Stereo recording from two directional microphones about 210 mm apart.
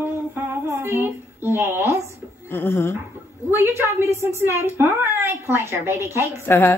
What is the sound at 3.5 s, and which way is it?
A woman's voice, 10° right (ahead or behind).